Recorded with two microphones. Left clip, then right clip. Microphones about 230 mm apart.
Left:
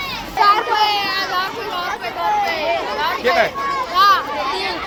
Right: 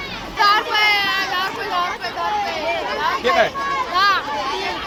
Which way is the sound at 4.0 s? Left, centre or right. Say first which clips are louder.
Left 4 dB; centre.